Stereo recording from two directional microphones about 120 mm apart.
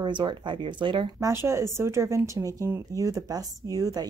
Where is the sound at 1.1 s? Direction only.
25° right (ahead or behind).